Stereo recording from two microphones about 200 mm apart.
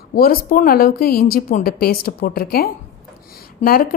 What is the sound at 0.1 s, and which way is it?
A woman's voice, 45° left (ahead or behind).